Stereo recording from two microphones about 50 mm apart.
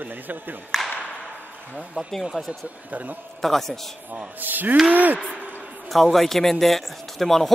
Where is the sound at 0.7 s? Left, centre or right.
Centre.